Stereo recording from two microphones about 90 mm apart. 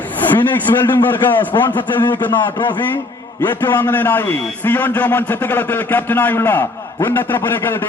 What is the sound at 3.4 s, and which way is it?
A man's voice, 20° left (ahead or behind).